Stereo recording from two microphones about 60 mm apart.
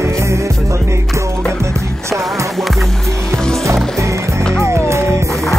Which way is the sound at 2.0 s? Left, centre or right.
Right.